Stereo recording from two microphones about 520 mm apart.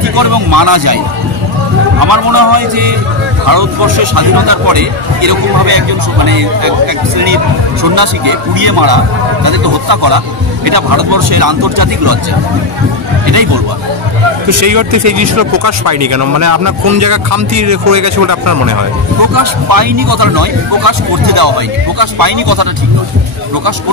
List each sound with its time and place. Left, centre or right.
0.1 s speech: right
2.0 s speech: right
7.8 s speech: right
14.5 s speech: right